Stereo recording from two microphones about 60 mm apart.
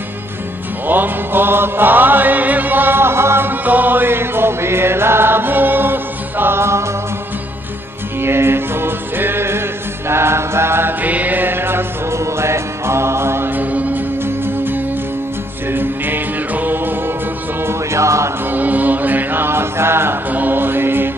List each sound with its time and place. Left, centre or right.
0.8 s music: right
8.2 s music: right
13.6 s mantra: right
14.2 s music: right
17.6 s music: right
18.5 s chant: right
20.2 s mantra: right